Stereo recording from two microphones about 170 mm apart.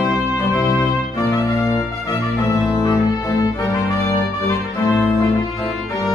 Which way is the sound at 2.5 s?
20° left (ahead or behind).